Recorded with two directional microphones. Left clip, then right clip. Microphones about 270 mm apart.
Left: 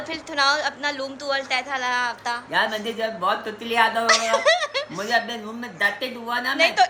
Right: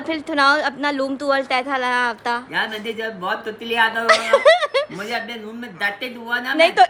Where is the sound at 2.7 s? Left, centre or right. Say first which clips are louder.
Even; centre.